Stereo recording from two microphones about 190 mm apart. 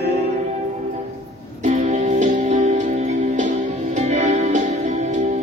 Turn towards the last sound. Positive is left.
turn(degrees=-35)  # may be behind; listen again after turning